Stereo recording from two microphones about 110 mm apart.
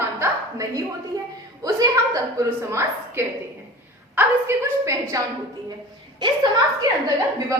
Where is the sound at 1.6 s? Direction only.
30° right (ahead or behind).